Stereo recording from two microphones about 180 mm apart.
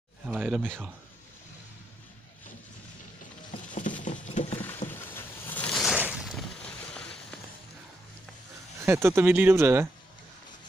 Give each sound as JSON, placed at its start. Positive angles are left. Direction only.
{"t": 0.3, "sound": "speech", "side_deg": -5}
{"t": 3.5, "sound": "patter", "side_deg": 45}
{"t": 4.8, "sound": "boat", "side_deg": 10}
{"t": 5.9, "sound": "a sound", "side_deg": -5}
{"t": 8.8, "sound": "speech", "side_deg": -15}